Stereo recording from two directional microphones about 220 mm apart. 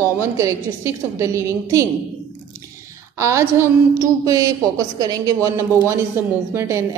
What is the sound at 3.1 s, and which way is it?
A woman's voice, 15° right (ahead or behind).